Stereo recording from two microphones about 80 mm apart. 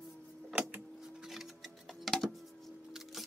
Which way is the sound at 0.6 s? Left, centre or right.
Right.